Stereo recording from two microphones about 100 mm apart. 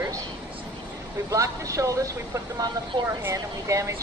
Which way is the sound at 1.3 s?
30° right (ahead or behind).